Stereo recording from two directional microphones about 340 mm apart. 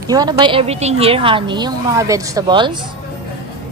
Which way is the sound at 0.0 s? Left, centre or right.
Centre.